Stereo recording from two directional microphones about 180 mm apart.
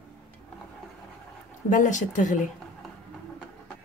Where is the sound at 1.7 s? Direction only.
45° left (ahead or behind).